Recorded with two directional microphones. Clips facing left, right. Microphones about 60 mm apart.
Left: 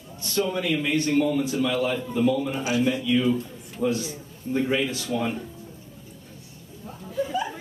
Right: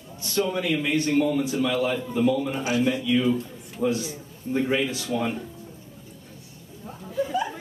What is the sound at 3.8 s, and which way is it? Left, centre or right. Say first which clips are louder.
A man's voice: even; centre.